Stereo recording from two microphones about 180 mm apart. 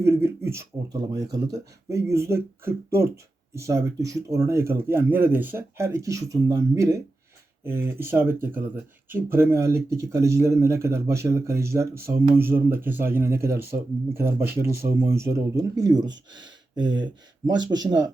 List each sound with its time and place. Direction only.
0.0 s speech: 15° right (ahead or behind)